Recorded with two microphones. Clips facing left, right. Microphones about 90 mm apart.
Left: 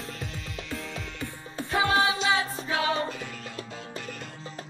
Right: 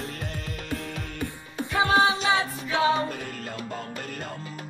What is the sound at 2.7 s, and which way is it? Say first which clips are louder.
Music: right 4 dB; 30° right (ahead or behind).